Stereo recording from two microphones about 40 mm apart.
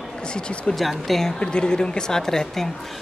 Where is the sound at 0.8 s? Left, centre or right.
Centre.